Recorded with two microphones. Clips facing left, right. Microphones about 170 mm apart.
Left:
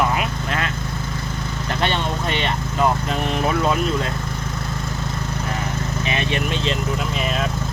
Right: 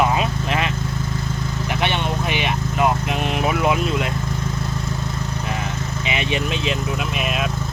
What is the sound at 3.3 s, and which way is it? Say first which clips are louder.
Speech: even; 15° right (ahead or behind).